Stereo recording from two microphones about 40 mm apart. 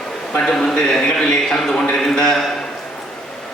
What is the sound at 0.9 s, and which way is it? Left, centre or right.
A man's voice, centre.